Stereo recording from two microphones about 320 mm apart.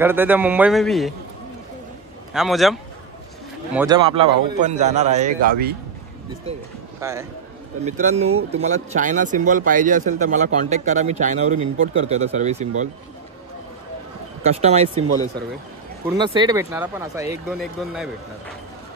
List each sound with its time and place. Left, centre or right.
0.0 s a man's voice: centre
2.3 s a man's voice: centre
3.7 s a man's voice: centre
7.0 s a man's voice: centre
7.8 s a man's voice: right
8.3 s speech: right
8.6 s a man's voice: right
14.4 s a man's voice: centre
16.1 s speech: centre